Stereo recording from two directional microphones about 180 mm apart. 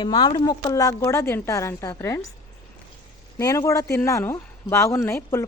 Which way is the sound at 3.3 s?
15° left (ahead or behind).